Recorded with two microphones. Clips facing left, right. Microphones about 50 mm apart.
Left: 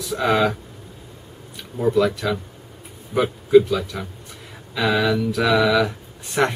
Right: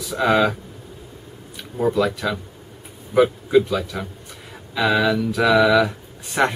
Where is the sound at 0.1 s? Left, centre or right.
Centre.